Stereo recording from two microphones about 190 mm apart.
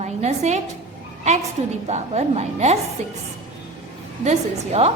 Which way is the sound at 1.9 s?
35° right (ahead or behind).